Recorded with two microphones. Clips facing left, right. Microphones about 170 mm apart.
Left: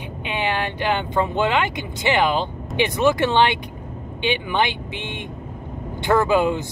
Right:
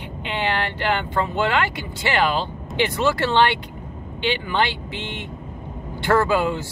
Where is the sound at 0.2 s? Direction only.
15° left (ahead or behind).